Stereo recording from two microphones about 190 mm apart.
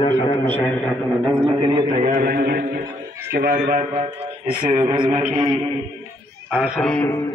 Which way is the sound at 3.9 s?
30° right (ahead or behind).